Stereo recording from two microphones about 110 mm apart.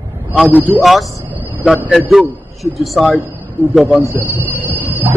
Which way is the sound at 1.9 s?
5° right (ahead or behind).